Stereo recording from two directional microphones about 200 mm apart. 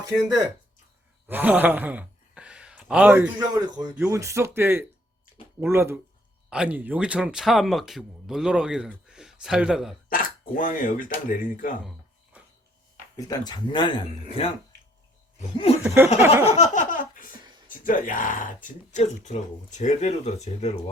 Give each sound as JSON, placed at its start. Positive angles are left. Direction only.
{"t": 1.3, "sound": "speech", "side_deg": -10}
{"t": 3.3, "sound": "speech", "side_deg": -20}
{"t": 10.1, "sound": "speech", "side_deg": 40}
{"t": 13.1, "sound": "speech", "side_deg": 20}
{"t": 16.2, "sound": "speech", "side_deg": -10}
{"t": 16.6, "sound": "a sound", "side_deg": 40}
{"t": 17.7, "sound": "speech", "side_deg": 40}